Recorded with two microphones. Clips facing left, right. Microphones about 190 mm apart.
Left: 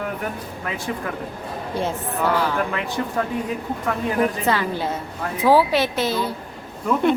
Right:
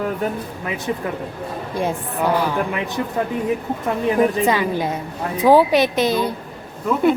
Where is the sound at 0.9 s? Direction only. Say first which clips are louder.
Right 5 dB; 20° right (ahead or behind).